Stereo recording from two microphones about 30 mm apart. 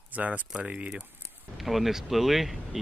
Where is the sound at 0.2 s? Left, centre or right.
Right.